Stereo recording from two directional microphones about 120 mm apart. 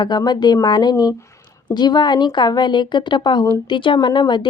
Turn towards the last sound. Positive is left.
turn(degrees=40)  # may be behind; listen again after turning